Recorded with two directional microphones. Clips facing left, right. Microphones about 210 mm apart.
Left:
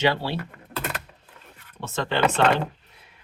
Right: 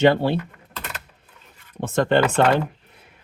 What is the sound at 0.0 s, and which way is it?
Speech, 50° right (ahead or behind).